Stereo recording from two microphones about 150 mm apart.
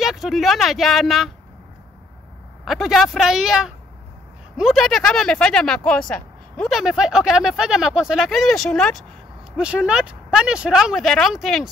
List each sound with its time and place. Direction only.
0.0 s speech: centre (ahead or behind)
2.6 s speech: centre (ahead or behind)